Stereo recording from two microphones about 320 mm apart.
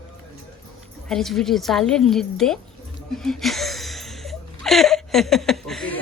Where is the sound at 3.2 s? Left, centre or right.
Centre.